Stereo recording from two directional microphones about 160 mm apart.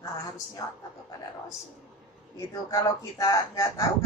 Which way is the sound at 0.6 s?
20° left (ahead or behind).